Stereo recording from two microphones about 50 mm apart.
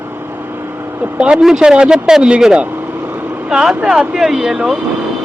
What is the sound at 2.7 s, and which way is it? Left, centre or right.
Vehicle, right.